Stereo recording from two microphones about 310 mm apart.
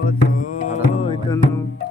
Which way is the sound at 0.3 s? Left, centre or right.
Left.